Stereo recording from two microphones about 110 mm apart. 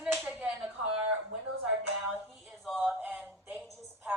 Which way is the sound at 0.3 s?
10° right (ahead or behind).